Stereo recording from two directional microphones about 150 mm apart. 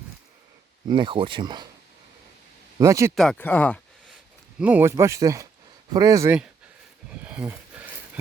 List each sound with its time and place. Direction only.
0.9 s speech: 30° right (ahead or behind)
2.7 s speech: 20° right (ahead or behind)
3.2 s speech: 5° left (ahead or behind)
4.6 s speech: 15° right (ahead or behind)
7.1 s a sound: 10° right (ahead or behind)